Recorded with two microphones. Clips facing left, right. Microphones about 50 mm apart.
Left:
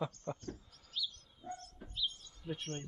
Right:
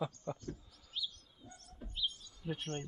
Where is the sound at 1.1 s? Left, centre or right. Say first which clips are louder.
Left 10 dB; left.